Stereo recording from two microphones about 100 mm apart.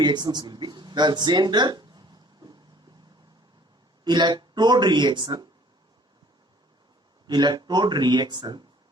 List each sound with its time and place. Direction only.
0.0 s speech: 45° right (ahead or behind)
4.0 s speech: 45° right (ahead or behind)
7.3 s speech: 45° right (ahead or behind)